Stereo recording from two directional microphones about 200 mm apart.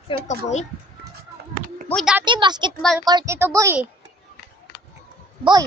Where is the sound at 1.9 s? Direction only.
Centre (ahead or behind).